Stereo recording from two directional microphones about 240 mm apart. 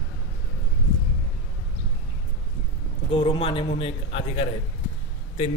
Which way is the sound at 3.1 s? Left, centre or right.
Left.